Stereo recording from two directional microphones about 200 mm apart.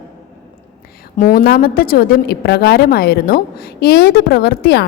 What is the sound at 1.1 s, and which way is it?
A woman's voice, 45° left (ahead or behind).